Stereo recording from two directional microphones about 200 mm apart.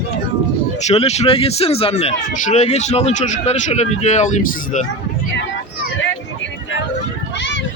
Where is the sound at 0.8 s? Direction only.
35° left (ahead or behind).